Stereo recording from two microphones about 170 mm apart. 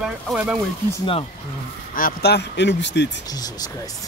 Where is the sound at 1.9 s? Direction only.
65° left (ahead or behind); by 3.1 s 90° left.